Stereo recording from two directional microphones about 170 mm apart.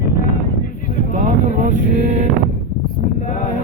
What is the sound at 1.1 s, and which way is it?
Vehicle, 50° right (ahead or behind).